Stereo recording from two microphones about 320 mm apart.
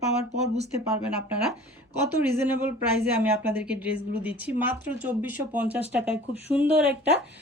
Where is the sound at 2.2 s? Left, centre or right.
Centre.